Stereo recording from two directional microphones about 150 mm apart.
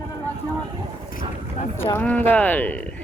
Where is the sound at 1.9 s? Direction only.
10° left (ahead or behind).